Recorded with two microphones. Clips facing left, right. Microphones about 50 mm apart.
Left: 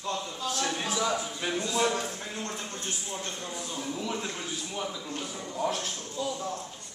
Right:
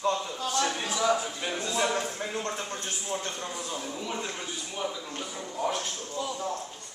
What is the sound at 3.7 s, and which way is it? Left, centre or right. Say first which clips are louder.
A man's voice: left 4 dB; centre.